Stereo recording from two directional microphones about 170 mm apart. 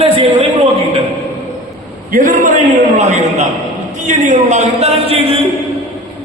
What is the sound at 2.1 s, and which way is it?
A man's voice, 50° right (ahead or behind).